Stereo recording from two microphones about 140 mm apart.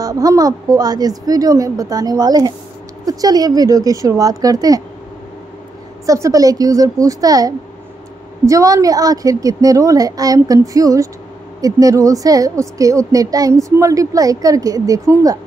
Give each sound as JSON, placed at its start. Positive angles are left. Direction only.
{"t": 0.0, "sound": "a woman's voice", "side_deg": -25}
{"t": 6.0, "sound": "a woman's voice", "side_deg": -20}